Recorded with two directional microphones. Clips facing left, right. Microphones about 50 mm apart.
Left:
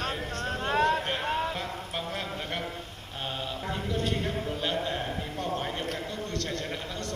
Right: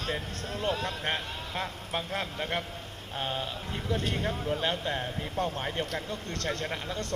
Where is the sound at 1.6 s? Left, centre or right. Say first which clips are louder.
Even; right.